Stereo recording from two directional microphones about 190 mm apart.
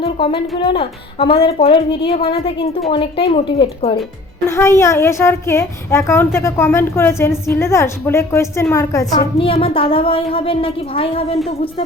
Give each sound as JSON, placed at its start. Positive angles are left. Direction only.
{"t": 0.0, "sound": "a woman's voice", "side_deg": 30}
{"t": 4.4, "sound": "a woman's voice", "side_deg": 15}
{"t": 9.4, "sound": "a woman's voice", "side_deg": 30}